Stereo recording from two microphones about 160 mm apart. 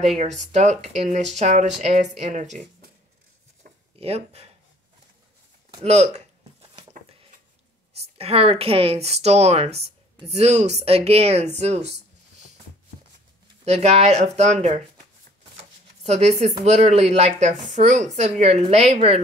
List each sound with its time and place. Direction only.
0.2 s speech: 50° right (ahead or behind)
3.6 s a sound: 65° right (ahead or behind)
4.0 s speech: 40° right (ahead or behind)
5.9 s a sound: 45° right (ahead or behind)
8.2 s speech: 35° right (ahead or behind)
13.7 s speech: 40° right (ahead or behind)
16.0 s speech: 40° right (ahead or behind)